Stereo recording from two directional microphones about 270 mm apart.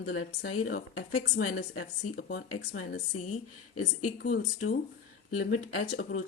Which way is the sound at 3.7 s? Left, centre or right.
Left.